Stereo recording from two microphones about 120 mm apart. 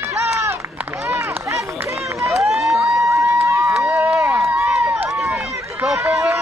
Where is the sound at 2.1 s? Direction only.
25° right (ahead or behind).